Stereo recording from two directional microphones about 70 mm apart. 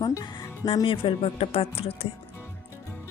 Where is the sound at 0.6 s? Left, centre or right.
Left.